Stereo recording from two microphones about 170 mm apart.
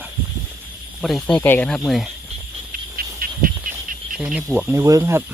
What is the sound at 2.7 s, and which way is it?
Cricket, 55° right (ahead or behind).